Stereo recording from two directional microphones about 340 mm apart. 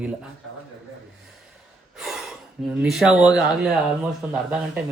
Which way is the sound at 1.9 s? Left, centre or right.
Centre.